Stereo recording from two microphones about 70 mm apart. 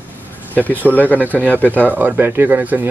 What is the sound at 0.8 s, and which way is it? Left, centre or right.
Speech, left.